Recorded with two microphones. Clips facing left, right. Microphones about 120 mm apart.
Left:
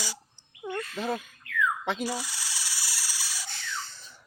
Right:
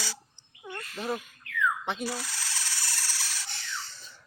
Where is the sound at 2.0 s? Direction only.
15° left (ahead or behind).